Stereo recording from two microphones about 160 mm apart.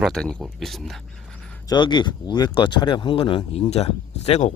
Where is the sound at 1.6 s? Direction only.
30° left (ahead or behind).